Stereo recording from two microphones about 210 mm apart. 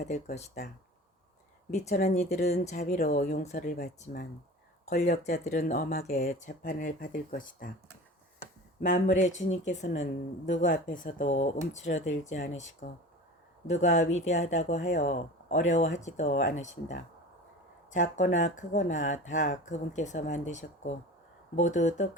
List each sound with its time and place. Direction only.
0.1 s speech: 40° left (ahead or behind)
1.7 s speech: 35° left (ahead or behind)
8.8 s speech: 35° left (ahead or behind)